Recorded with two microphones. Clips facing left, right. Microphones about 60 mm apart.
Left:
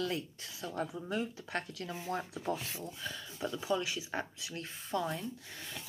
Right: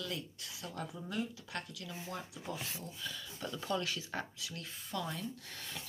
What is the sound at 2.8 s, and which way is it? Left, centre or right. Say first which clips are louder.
Speech: left 3 dB; left.